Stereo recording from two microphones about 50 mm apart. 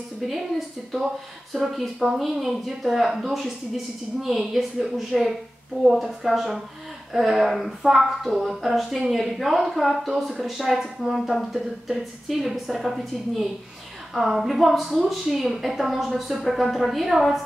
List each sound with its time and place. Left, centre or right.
0.2 s speech: centre